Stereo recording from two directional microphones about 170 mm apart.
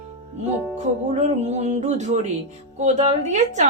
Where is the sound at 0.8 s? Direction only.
40° right (ahead or behind).